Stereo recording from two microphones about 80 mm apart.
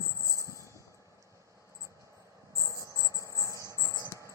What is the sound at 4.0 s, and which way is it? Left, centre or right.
Cricket, left.